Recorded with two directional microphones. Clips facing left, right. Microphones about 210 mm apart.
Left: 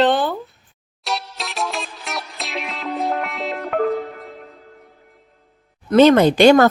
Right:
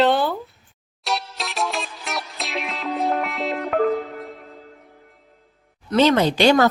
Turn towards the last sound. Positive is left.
turn(degrees=50)  # may be behind; listen again after turning